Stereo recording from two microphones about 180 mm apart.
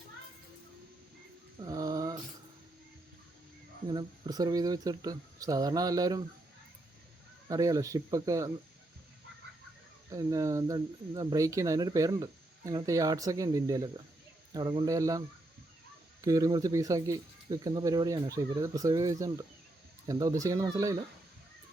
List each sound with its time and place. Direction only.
1.6 s a sound: 20° right (ahead or behind)
3.8 s speech: 25° right (ahead or behind)
7.4 s speech: 20° right (ahead or behind)
10.1 s speech: 20° right (ahead or behind)
16.2 s speech: 20° right (ahead or behind)